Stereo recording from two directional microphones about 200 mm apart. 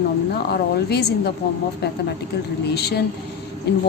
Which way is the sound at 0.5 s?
55° left (ahead or behind).